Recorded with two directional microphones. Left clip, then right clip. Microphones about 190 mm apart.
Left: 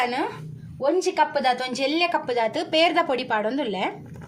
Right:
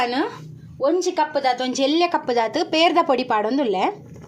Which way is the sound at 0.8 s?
25° right (ahead or behind).